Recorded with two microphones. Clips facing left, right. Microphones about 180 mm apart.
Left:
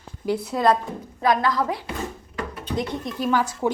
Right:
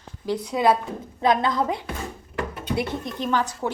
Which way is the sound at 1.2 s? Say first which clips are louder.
Even; 25° right (ahead or behind).